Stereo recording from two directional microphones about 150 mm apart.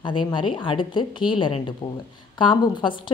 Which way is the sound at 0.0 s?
30° left (ahead or behind).